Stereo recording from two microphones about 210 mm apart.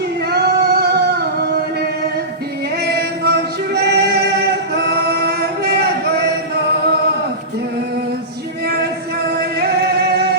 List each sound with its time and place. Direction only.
0.3 s singing: 50° right (ahead or behind)
2.8 s music: 50° right (ahead or behind)
4.8 s male singing: 50° right (ahead or behind)
8.6 s music: 50° right (ahead or behind)